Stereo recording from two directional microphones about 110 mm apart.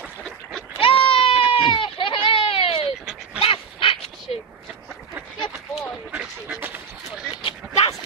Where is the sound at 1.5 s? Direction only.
50° left (ahead or behind).